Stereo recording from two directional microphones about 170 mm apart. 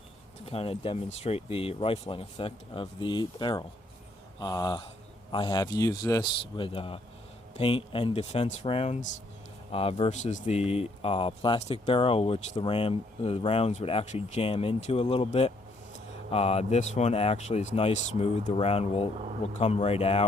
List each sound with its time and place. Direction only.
0.4 s speech: 35° left (ahead or behind)
6.6 s speech: 30° left (ahead or behind)